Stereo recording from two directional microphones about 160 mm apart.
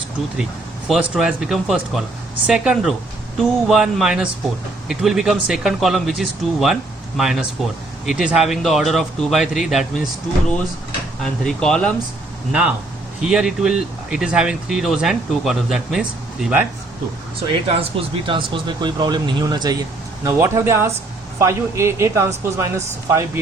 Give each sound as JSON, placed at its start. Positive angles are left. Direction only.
{"t": 0.9, "sound": "speech", "side_deg": -5}
{"t": 11.2, "sound": "speech", "side_deg": 5}
{"t": 12.5, "sound": "speech", "side_deg": -5}
{"t": 18.0, "sound": "speech", "side_deg": -35}